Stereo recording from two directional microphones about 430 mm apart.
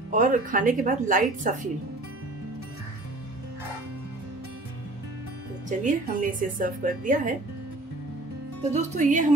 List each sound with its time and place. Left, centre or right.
0.1 s a woman's voice: centre
5.7 s a woman's voice: centre
8.7 s a woman's voice: centre